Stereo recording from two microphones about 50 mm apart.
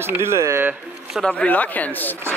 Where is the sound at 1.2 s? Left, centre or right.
Left.